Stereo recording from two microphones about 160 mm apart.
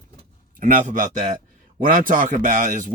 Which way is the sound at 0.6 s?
55° right (ahead or behind).